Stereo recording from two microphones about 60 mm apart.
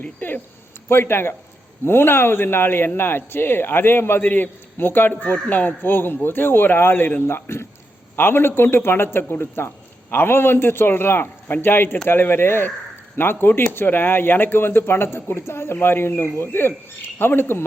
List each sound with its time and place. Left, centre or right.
0.0 s speech: left
0.9 s speech: left